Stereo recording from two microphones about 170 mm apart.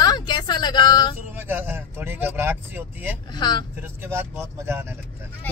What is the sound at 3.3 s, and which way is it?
Speech, 25° left (ahead or behind).